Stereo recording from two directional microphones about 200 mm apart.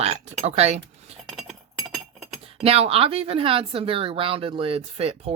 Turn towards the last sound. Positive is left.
turn(degrees=-30)  # may be behind; listen again after turning